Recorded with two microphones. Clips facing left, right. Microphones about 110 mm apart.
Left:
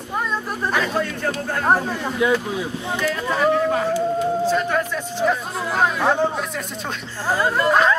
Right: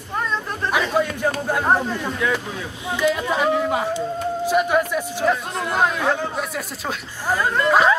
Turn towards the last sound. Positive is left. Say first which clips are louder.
# right 1 dB
turn(degrees=-5)  # may be behind; listen again after turning